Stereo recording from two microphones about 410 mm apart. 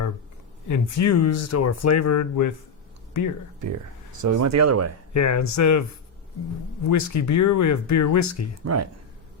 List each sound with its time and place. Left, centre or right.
0.7 s speech: left
4.2 s speech: right
5.1 s speech: left
6.8 s speech: left
8.6 s speech: right